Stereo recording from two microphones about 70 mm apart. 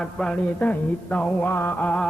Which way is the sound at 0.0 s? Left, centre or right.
Centre.